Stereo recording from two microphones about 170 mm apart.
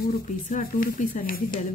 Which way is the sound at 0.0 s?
55° left (ahead or behind).